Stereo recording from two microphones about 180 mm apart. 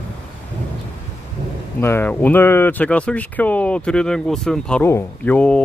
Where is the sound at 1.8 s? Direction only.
15° left (ahead or behind).